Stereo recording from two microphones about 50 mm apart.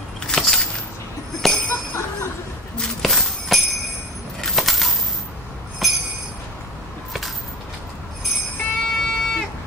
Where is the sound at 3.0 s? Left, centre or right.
Centre.